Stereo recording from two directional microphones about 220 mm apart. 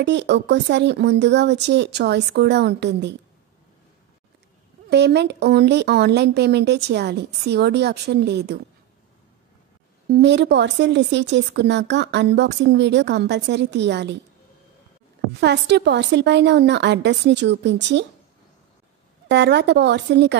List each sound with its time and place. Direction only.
0.0 s a woman's voice: 50° right (ahead or behind)
4.8 s a woman's voice: 50° right (ahead or behind)
10.0 s a woman's voice: 50° right (ahead or behind)
15.4 s a woman's voice: 50° right (ahead or behind)
19.2 s a woman's voice: 50° right (ahead or behind)